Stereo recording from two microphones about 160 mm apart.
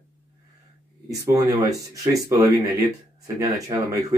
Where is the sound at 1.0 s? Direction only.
20° right (ahead or behind).